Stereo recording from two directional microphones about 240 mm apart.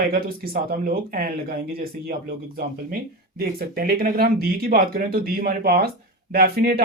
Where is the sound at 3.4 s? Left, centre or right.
Right.